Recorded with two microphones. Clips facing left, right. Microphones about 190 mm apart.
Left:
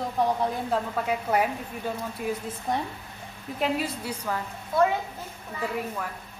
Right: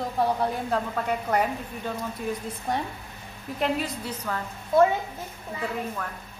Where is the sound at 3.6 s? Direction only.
5° left (ahead or behind).